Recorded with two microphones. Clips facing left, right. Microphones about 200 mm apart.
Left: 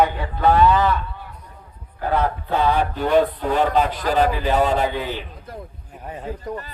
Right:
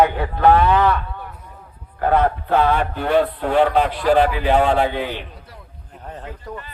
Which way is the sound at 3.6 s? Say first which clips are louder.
Right 3 dB; 40° left (ahead or behind).